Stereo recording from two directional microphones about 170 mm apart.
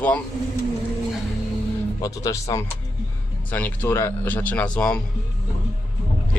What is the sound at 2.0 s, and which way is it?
Speech, 20° left (ahead or behind).